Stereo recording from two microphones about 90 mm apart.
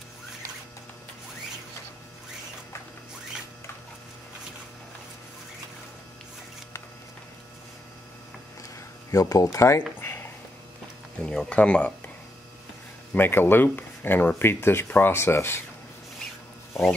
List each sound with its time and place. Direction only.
9.1 s speech: 40° left (ahead or behind)
9.8 s a sound: 25° left (ahead or behind)
11.1 s speech: 10° left (ahead or behind)
13.1 s speech: 20° left (ahead or behind)